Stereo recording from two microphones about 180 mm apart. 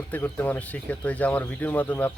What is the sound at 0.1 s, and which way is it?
Speech, 10° left (ahead or behind).